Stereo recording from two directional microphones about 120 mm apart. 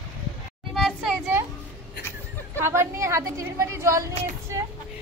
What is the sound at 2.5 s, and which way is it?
A woman's voice, 20° right (ahead or behind).